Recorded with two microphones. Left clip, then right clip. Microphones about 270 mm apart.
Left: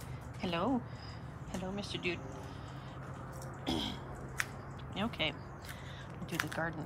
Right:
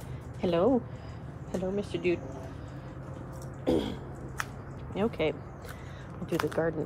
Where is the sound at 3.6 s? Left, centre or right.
Centre.